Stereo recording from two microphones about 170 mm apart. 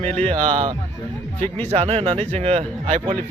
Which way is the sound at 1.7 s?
35° right (ahead or behind).